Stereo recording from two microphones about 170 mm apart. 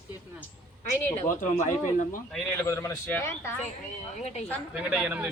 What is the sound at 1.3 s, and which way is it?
Speech, 50° left (ahead or behind).